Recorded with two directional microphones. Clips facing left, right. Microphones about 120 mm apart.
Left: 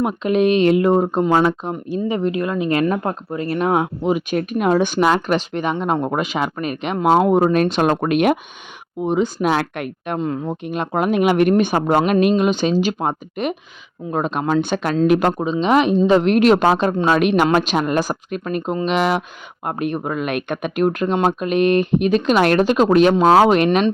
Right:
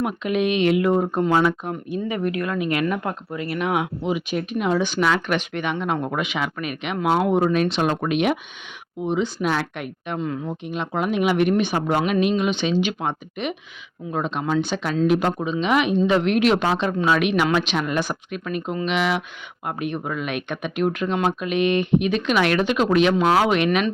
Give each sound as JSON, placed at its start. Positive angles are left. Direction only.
{"t": 0.0, "sound": "speech", "side_deg": 35}
{"t": 5.2, "sound": "speech", "side_deg": 35}
{"t": 10.2, "sound": "speech", "side_deg": 40}
{"t": 15.3, "sound": "speech", "side_deg": 35}